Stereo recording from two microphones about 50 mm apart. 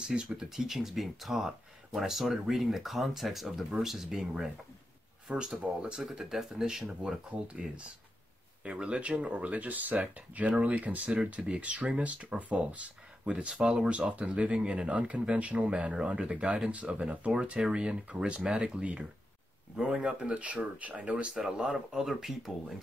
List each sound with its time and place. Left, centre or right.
0.0 s speech: centre
5.5 s speech: centre
7.2 s speech: right
21.4 s speech: centre